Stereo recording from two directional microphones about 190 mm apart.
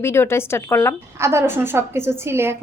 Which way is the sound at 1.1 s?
15° right (ahead or behind).